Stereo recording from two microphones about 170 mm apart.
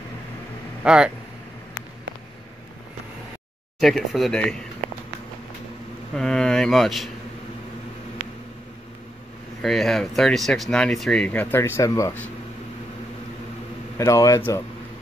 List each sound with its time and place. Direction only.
0.8 s speech: 5° right (ahead or behind)
3.8 s speech: centre (ahead or behind)
6.1 s speech: 5° left (ahead or behind)
9.6 s speech: centre (ahead or behind)
13.9 s speech: 20° left (ahead or behind)